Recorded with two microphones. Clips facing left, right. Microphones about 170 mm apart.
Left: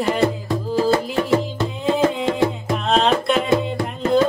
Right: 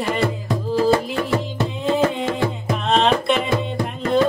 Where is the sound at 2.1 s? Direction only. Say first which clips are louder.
Left 3 dB; centre (ahead or behind).